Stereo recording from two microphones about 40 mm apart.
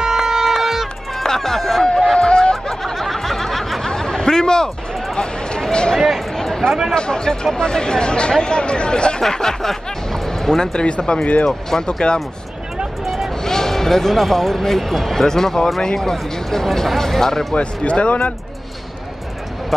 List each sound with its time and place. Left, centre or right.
0.0 s music: centre
1.2 s run: centre
2.1 s snicker: left
2.8 s snicker: centre
3.8 s a sound: centre
5.9 s speech: centre
6.3 s a sound: centre
7.0 s speech: centre
9.2 s speech: centre
13.0 s vehicle: centre
13.4 s speech: centre
17.6 s speech: left